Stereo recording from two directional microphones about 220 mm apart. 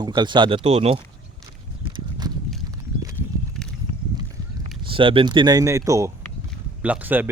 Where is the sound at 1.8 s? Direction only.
20° right (ahead or behind).